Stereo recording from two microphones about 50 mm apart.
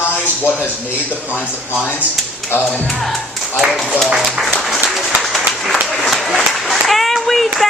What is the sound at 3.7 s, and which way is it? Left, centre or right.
Speech, centre.